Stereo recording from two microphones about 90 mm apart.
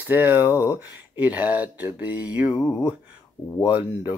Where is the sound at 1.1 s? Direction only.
20° right (ahead or behind).